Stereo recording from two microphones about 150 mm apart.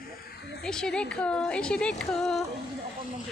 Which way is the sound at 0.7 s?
5° left (ahead or behind).